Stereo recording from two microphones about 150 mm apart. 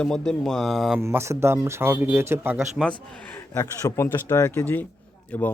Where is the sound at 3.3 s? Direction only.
20° left (ahead or behind).